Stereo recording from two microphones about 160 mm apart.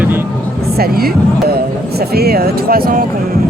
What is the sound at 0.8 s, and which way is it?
Speech, 70° right (ahead or behind).